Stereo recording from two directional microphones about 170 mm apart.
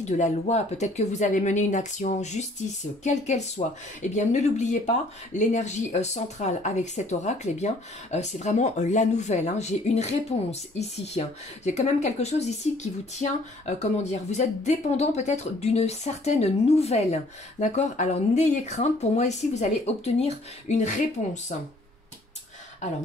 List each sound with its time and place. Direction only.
0.0 s speech: 45° left (ahead or behind)